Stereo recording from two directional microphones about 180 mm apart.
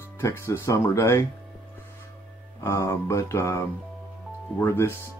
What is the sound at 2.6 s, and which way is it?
Speech, 15° left (ahead or behind).